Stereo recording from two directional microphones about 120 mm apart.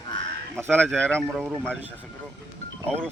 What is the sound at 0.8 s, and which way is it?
Speech, 10° left (ahead or behind).